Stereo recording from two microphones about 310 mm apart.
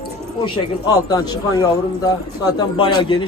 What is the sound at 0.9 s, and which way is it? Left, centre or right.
A man's voice, centre.